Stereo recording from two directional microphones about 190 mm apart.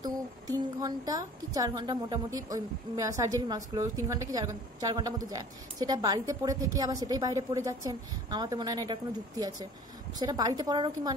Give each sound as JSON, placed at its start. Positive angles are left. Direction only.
{"t": 0.0, "sound": "a woman's voice", "side_deg": -20}